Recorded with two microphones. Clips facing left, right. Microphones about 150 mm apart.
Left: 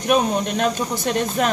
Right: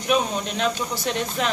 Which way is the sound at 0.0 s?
50° left (ahead or behind).